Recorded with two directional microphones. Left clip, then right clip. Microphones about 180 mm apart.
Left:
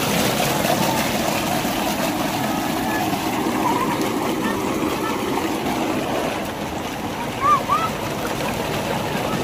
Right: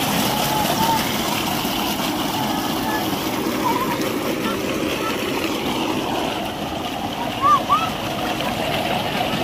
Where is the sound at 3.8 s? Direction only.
15° left (ahead or behind).